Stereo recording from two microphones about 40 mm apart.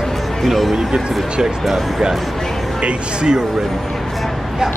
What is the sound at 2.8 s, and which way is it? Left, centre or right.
Speech, right.